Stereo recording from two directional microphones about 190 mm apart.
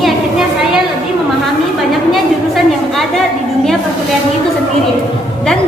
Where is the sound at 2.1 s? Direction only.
Centre (ahead or behind).